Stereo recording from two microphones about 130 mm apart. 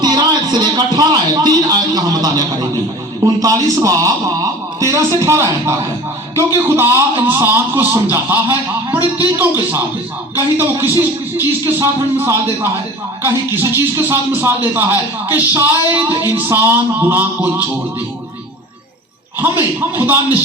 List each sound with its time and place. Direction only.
0.0 s a sound: 35° right (ahead or behind)
3.2 s a man's voice: 30° right (ahead or behind)
20.0 s speech: 15° right (ahead or behind)